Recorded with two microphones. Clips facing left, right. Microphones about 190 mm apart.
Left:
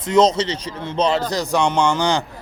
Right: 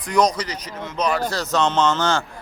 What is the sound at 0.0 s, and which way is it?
Speech, 25° left (ahead or behind).